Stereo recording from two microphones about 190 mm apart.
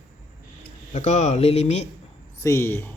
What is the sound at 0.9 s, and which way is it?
Speech, 40° left (ahead or behind).